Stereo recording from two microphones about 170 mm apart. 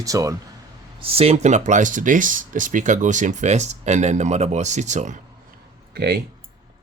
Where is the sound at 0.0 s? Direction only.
20° right (ahead or behind).